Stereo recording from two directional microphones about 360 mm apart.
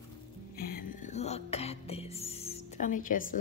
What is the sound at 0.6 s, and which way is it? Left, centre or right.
A woman's voice, left.